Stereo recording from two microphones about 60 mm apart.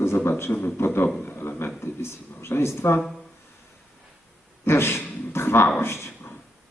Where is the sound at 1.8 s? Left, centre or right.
Left.